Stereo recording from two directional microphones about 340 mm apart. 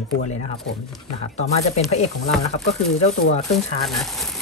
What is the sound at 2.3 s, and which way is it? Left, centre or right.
Speech, centre.